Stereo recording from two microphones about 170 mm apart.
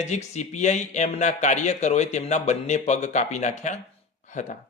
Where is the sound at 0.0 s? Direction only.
40° left (ahead or behind).